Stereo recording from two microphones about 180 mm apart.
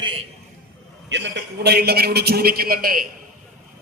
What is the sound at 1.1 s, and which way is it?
A man's voice, 70° right (ahead or behind).